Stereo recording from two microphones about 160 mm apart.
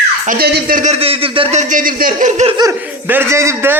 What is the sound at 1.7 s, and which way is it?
Speech, 60° right (ahead or behind).